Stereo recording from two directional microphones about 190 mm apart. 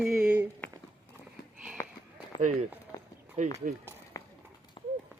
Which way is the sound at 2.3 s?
40° right (ahead or behind).